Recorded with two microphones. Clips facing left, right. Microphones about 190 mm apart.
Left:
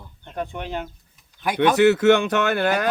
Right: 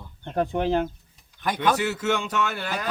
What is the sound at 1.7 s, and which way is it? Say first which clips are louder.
Speech: left 10 dB; 65° left (ahead or behind).